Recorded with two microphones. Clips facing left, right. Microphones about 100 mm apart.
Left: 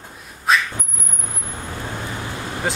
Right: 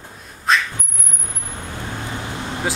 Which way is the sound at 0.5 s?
5° left (ahead or behind).